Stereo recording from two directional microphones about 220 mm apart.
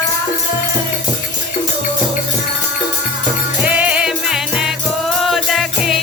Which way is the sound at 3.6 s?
5° right (ahead or behind).